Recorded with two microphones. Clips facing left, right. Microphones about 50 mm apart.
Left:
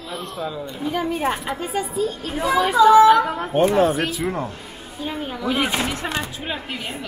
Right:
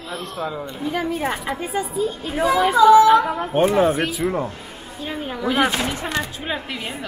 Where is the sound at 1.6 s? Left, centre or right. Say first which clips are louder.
Right 1 dB; centre.